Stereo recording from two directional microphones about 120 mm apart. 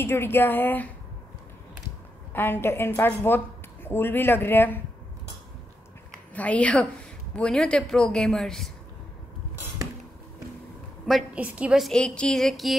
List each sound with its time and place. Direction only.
0.0 s speech: 20° left (ahead or behind)
2.3 s a woman's voice: 15° left (ahead or behind)
6.3 s a woman's voice: 10° left (ahead or behind)
11.3 s a woman's voice: 10° right (ahead or behind)
11.8 s speech: 5° left (ahead or behind)